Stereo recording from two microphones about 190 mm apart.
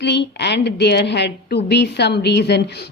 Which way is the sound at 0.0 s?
65° left (ahead or behind).